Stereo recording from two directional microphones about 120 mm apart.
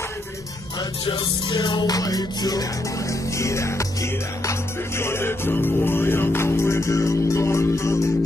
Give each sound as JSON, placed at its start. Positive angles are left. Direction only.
{"t": 1.0, "sound": "music", "side_deg": 35}